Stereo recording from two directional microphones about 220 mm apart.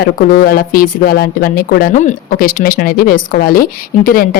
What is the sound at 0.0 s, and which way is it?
Speech, 45° left (ahead or behind).